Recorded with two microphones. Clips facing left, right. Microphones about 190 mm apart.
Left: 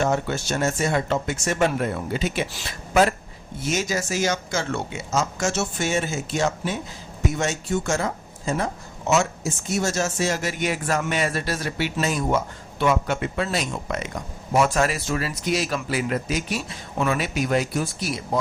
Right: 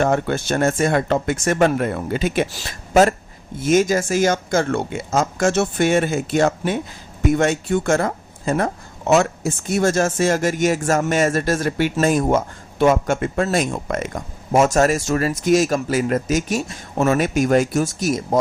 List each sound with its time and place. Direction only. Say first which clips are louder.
0.0 s speech: right 4 dB; 55° right (ahead or behind)